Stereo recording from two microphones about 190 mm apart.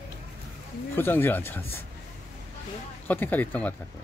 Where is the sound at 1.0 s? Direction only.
10° left (ahead or behind).